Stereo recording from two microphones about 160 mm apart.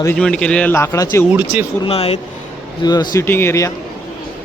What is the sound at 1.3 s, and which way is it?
Speech, 10° right (ahead or behind).